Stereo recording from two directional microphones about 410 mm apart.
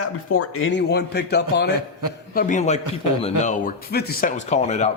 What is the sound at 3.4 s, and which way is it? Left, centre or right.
Speech, centre.